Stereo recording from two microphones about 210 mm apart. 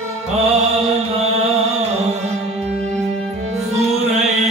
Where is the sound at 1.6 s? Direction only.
30° right (ahead or behind).